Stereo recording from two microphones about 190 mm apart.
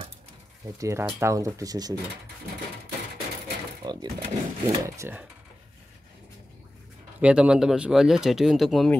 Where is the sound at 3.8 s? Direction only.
20° right (ahead or behind).